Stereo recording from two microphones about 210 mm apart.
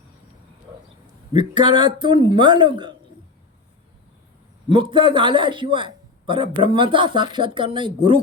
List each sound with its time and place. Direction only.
1.3 s a man's voice: 20° right (ahead or behind)
4.7 s a man's voice: 25° right (ahead or behind)